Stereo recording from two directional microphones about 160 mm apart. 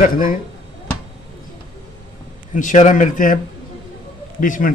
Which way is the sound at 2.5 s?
50° left (ahead or behind).